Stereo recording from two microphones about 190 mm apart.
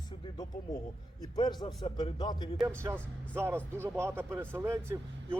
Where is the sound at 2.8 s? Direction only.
10° right (ahead or behind).